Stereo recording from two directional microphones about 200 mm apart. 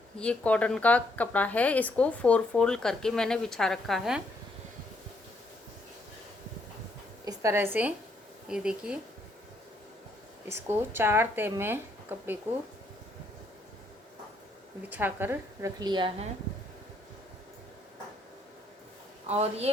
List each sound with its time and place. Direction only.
0.2 s speech: 5° left (ahead or behind)
7.3 s a woman's voice: 15° right (ahead or behind)
10.5 s speech: 10° right (ahead or behind)
14.8 s speech: 10° right (ahead or behind); by 16.3 s 25° right (ahead or behind)
19.3 s a man's voice: 30° right (ahead or behind)